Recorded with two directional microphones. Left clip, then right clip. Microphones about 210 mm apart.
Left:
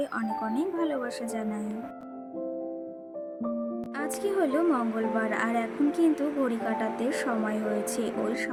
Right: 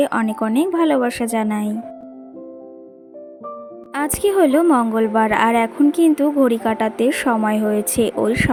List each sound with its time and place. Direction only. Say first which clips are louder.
0.0 s a woman's voice: right 12 dB; 40° right (ahead or behind)
3.9 s a woman's voice: right 12 dB; 40° right (ahead or behind)